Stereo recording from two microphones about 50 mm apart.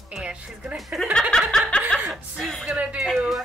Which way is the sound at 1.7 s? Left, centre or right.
Centre.